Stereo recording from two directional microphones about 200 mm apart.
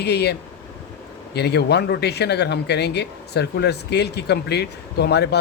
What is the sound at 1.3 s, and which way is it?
Speech, 55° left (ahead or behind).